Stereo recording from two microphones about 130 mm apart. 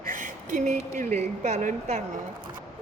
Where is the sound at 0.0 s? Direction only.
90° right; by 0.8 s 70° right (ahead or behind).